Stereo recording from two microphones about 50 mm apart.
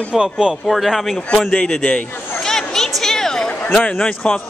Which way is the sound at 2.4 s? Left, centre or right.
Centre.